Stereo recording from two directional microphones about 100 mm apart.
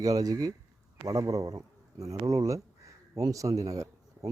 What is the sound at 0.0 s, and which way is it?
Speech, 40° right (ahead or behind).